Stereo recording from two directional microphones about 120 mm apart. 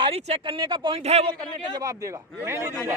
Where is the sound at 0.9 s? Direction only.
60° right (ahead or behind).